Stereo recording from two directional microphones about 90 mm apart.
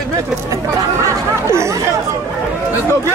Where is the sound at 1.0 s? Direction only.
30° right (ahead or behind).